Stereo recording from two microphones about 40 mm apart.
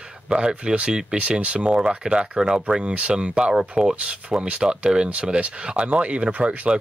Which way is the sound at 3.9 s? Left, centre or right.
Right.